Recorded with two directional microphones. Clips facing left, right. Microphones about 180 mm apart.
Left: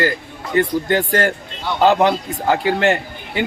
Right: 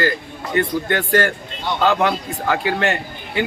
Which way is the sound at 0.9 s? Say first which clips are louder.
Left 1 dB; 20° left (ahead or behind).